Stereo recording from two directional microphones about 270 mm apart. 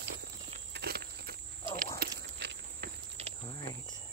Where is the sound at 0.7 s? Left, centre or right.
Right.